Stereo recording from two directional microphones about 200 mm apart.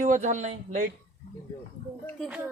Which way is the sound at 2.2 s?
5° right (ahead or behind).